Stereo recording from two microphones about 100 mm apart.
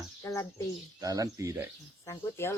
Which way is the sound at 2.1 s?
30° left (ahead or behind).